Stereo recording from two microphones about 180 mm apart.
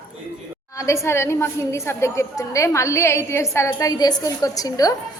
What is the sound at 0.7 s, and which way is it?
A woman's voice, 15° left (ahead or behind).